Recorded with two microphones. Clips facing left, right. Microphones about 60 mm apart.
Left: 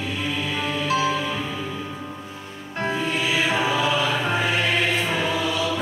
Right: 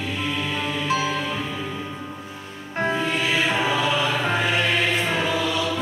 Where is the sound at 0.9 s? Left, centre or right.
Centre.